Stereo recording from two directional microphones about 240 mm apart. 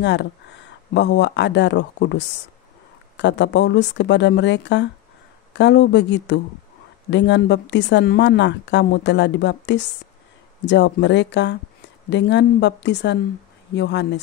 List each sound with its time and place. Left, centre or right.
0.0 s a woman's voice: left